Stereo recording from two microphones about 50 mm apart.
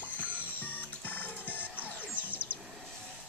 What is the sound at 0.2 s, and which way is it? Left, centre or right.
Music, left.